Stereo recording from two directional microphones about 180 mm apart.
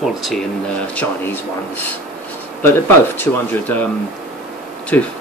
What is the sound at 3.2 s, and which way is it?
Speech, 10° left (ahead or behind).